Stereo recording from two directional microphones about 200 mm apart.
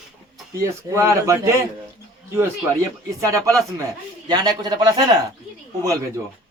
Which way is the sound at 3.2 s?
15° right (ahead or behind).